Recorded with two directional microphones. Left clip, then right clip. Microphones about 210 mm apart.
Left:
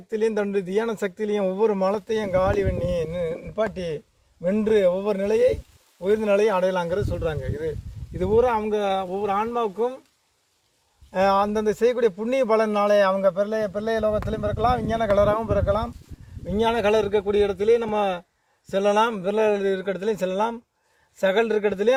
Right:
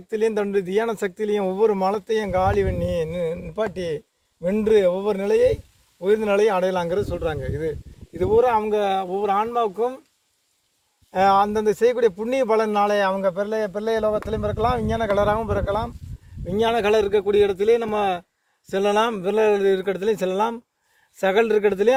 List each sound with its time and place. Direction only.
0.1 s speech: 40° right (ahead or behind)
11.1 s a man's voice: 45° right (ahead or behind)
16.5 s speech: 50° right (ahead or behind)